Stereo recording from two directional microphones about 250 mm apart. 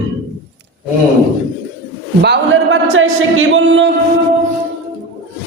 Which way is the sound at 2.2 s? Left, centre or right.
Right.